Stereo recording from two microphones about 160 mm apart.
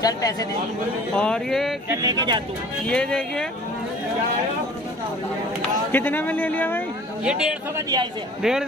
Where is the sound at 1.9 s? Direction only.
20° right (ahead or behind).